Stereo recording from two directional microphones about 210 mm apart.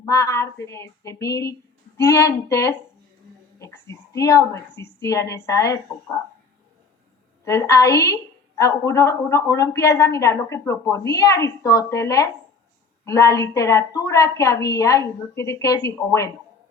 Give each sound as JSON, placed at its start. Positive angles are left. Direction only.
{"t": 0.0, "sound": "a woman's voice", "side_deg": 15}
{"t": 7.4, "sound": "a woman's voice", "side_deg": 15}